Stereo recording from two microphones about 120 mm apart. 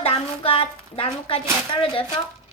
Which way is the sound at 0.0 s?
55° left (ahead or behind).